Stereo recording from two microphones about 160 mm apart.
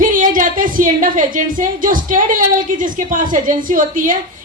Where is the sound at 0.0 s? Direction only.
55° right (ahead or behind).